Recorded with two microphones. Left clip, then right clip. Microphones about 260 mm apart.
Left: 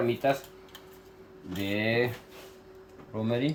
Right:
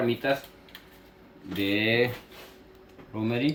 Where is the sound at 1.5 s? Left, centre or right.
Left.